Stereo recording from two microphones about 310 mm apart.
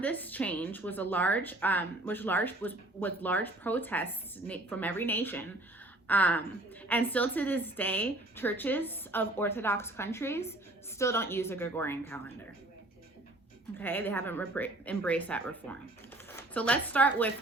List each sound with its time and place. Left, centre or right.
0.0 s a woman's voice: centre
13.7 s a woman's voice: centre